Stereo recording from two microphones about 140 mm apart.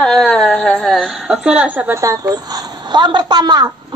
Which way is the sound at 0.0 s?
10° left (ahead or behind).